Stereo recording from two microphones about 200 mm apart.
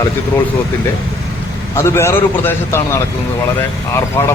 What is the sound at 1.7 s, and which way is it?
A man's voice, 15° left (ahead or behind).